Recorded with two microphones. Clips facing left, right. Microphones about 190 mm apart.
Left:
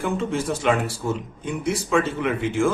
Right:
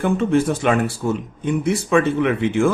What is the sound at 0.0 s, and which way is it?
Speech, 60° right (ahead or behind).